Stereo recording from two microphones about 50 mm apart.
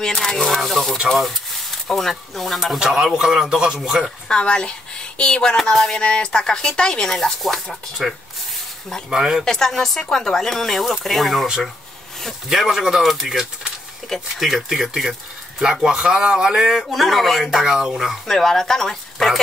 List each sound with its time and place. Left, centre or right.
0.0 s a man's voice: centre
4.3 s a woman's voice: centre
5.6 s speech: centre
8.0 s a man's voice: centre
9.4 s speech: centre
12.4 s a man's voice: centre
14.0 s speech: centre
14.5 s a man's voice: centre
18.2 s speech: centre